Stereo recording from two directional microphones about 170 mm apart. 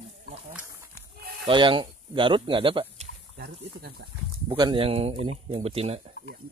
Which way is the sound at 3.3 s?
65° right (ahead or behind).